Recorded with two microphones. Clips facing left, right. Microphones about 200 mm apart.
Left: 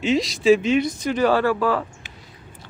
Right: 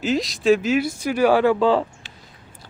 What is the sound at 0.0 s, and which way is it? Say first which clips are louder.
Speech: left 1 dB; centre (ahead or behind).